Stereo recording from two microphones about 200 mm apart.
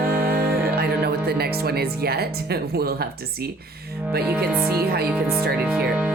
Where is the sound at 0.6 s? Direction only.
50° right (ahead or behind).